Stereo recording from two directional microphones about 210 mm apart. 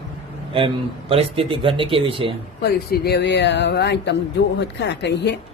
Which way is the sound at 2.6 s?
50° left (ahead or behind).